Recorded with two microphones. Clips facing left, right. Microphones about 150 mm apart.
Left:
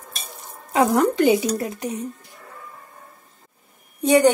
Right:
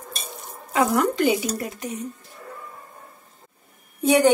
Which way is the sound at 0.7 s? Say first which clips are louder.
Left 3 dB; 25° left (ahead or behind).